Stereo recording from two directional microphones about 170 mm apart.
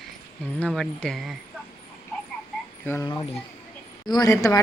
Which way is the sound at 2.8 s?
15° left (ahead or behind).